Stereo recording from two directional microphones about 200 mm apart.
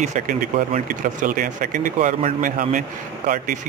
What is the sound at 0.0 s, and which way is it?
Speech, 35° right (ahead or behind).